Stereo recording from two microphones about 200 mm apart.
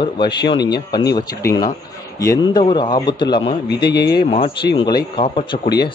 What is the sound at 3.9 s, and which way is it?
Speech, 55° left (ahead or behind).